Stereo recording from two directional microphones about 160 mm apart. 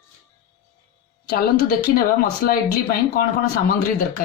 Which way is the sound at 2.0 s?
65° left (ahead or behind).